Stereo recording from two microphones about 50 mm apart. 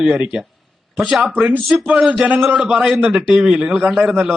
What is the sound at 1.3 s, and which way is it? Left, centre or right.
Speech, right.